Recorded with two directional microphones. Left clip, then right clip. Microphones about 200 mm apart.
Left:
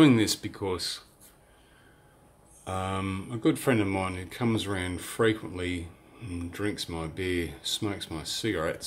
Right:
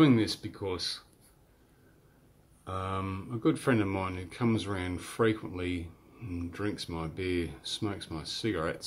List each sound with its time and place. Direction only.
0.0 s speech: 15° left (ahead or behind)
2.6 s speech: 10° left (ahead or behind)